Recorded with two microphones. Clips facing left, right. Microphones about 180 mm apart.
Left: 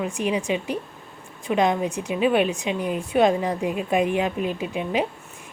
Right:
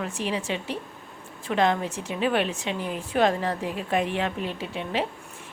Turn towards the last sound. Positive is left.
turn(degrees=10)  # may be behind; listen again after turning